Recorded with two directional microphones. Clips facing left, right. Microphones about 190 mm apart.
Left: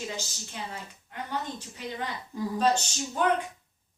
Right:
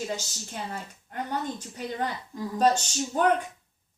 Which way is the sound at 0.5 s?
45° right (ahead or behind).